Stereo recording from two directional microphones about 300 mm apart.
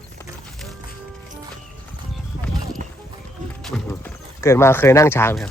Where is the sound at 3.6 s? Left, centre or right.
Centre.